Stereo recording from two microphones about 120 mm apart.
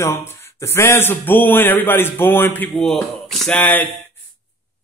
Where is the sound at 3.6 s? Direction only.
15° left (ahead or behind).